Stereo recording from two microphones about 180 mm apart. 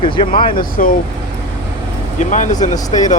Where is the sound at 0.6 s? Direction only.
50° left (ahead or behind).